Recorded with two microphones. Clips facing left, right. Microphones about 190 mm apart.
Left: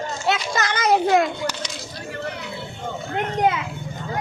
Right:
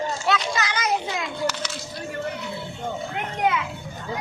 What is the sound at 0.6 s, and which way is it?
Children playing, 55° left (ahead or behind).